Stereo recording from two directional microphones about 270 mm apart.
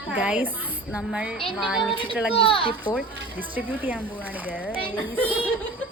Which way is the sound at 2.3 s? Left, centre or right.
Centre.